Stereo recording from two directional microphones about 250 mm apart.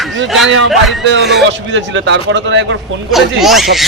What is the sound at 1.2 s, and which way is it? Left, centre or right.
A man's voice, right.